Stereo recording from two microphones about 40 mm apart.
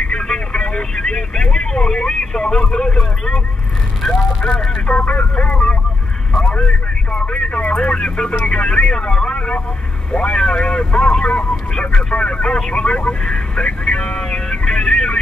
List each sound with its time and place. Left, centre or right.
0.1 s speech: left
4.4 s speech: centre
4.8 s speech: left
6.3 s speech: left